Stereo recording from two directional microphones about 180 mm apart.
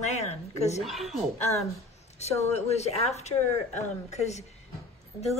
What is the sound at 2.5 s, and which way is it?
Speech, 35° left (ahead or behind).